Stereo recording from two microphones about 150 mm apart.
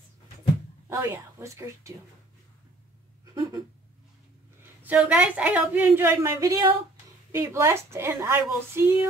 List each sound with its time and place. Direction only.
0.8 s a woman's voice: 20° right (ahead or behind)
3.3 s a sound: 25° right (ahead or behind)
4.8 s a woman's voice: 10° right (ahead or behind)